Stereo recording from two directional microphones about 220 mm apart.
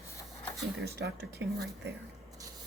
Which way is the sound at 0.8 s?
50° right (ahead or behind).